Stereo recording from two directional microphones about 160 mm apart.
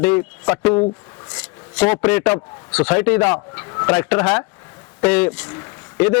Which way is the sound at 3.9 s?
10° left (ahead or behind).